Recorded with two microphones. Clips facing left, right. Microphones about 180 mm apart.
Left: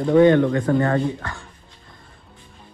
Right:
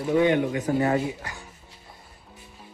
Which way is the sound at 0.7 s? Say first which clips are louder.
Left 3 dB; 65° left (ahead or behind).